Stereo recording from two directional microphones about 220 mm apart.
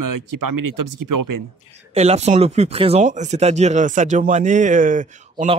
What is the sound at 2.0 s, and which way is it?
Speech, 30° right (ahead or behind).